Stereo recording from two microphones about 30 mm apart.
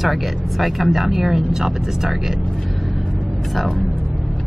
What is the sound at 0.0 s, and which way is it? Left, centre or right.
A woman's voice, centre.